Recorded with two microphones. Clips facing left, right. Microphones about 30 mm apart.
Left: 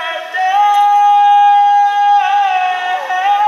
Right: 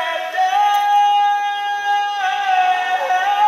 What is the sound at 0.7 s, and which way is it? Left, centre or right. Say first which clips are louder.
Yodeling: left 5 dB; centre.